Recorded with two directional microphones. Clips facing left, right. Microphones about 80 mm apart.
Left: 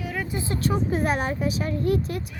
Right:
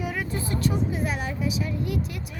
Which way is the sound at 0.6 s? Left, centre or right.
Left.